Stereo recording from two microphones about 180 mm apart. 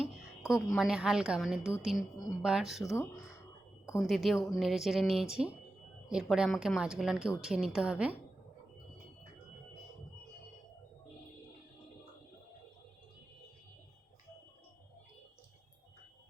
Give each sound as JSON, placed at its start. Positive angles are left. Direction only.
{"t": 0.0, "sound": "a sound", "side_deg": 0}
{"t": 0.8, "sound": "a woman's voice", "side_deg": 0}
{"t": 2.8, "sound": "speech", "side_deg": 15}
{"t": 4.0, "sound": "a woman's voice", "side_deg": 0}